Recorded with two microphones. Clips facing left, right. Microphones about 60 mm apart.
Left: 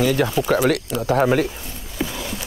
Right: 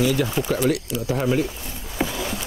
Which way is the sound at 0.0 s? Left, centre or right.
Left.